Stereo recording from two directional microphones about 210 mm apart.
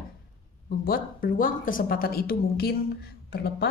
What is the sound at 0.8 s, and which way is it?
Speech, 45° left (ahead or behind).